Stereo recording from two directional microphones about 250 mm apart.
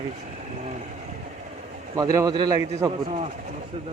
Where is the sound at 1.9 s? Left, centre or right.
Centre.